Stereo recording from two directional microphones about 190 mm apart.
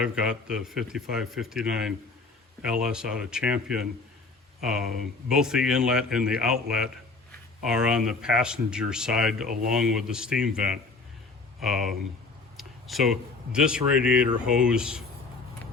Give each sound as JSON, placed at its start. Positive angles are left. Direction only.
{"t": 0.0, "sound": "speech", "side_deg": -5}
{"t": 9.5, "sound": "speech", "side_deg": -45}
{"t": 9.7, "sound": "speech", "side_deg": -5}
{"t": 11.6, "sound": "speech", "side_deg": 0}